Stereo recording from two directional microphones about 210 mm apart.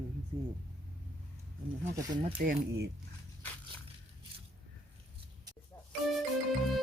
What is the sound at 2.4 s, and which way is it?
Speech, 45° right (ahead or behind).